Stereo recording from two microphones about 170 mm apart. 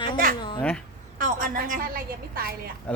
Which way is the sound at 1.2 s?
50° right (ahead or behind).